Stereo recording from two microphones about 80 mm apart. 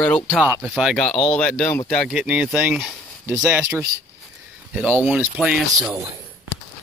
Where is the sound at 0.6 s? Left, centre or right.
Centre.